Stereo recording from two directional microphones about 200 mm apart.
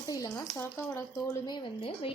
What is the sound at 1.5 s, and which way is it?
Speech, 25° left (ahead or behind).